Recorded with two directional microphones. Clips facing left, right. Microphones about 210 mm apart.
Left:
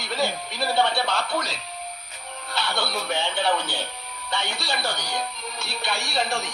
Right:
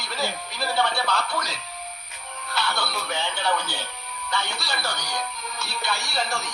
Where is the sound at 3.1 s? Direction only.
30° left (ahead or behind).